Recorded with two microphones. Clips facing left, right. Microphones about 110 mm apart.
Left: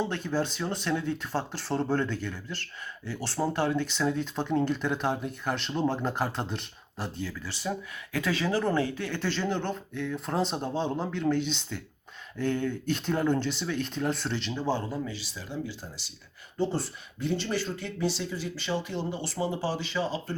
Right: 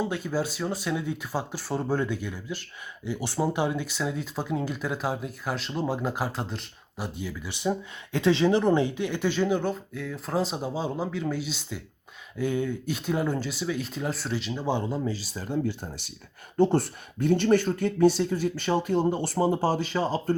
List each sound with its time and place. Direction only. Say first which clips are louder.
0.0 s speech: right 1 dB; 5° right (ahead or behind); by 15.1 s 25° right (ahead or behind)
15.1 s speech: right 7 dB; 40° right (ahead or behind)